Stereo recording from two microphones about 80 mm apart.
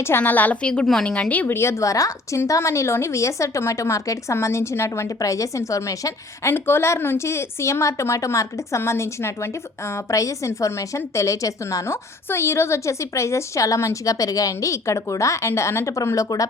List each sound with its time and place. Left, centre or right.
0.2 s a woman's voice: left
1.5 s speech: left
6.5 s speech: left